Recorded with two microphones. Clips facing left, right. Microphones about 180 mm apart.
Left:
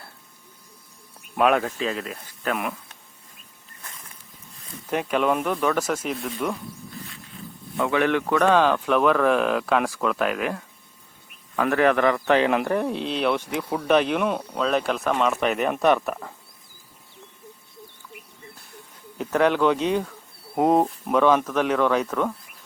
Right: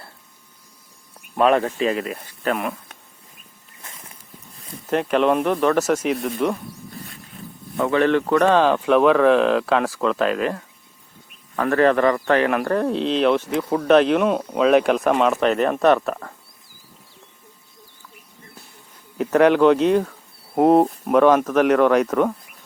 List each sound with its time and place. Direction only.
1.4 s speech: 5° left (ahead or behind)
4.9 s speech: 5° left (ahead or behind)
6.1 s speech: 55° right (ahead or behind)
7.8 s speech: 5° left (ahead or behind); by 15.2 s 15° right (ahead or behind)
15.4 s speech: 10° left (ahead or behind)
19.1 s speech: 5° right (ahead or behind)